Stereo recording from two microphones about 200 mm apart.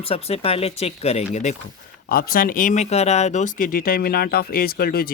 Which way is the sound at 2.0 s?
45° left (ahead or behind).